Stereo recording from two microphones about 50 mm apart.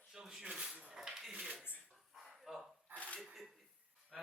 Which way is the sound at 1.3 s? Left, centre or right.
Right.